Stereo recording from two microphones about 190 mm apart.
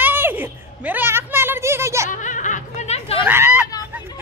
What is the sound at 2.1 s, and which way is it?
Snicker, 40° left (ahead or behind).